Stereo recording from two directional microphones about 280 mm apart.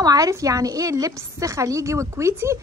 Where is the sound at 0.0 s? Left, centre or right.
Centre.